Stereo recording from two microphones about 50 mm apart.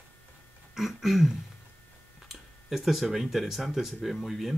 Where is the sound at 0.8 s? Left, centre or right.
Centre.